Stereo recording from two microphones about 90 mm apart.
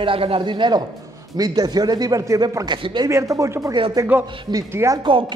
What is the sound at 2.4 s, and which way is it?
Speech, 50° right (ahead or behind).